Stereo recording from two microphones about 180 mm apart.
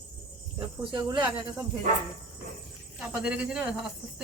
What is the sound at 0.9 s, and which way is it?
Speech, 25° right (ahead or behind).